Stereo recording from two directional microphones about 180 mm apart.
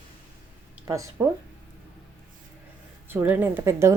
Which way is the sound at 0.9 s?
15° right (ahead or behind).